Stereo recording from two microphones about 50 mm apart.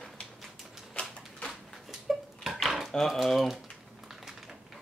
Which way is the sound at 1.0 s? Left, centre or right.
Left.